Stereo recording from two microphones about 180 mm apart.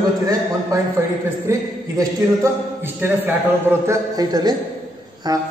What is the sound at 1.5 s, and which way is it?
A man's voice, 15° right (ahead or behind).